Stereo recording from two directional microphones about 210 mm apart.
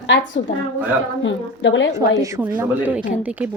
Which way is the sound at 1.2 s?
65° left (ahead or behind).